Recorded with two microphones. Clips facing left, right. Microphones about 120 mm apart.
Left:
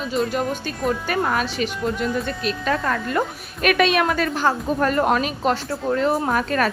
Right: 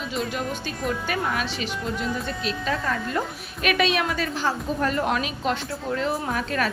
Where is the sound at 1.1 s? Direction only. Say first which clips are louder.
Left 4 dB; 45° left (ahead or behind).